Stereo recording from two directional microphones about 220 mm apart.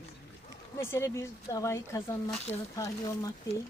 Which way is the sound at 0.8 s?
10° left (ahead or behind).